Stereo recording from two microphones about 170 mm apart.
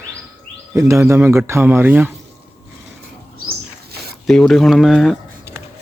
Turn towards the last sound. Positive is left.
turn(degrees=0)  # may be behind; listen again after turning